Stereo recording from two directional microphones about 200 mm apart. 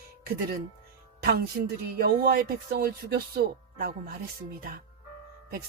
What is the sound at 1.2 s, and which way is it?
Speech, 50° right (ahead or behind).